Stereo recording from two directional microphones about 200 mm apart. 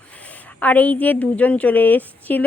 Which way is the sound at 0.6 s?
10° left (ahead or behind).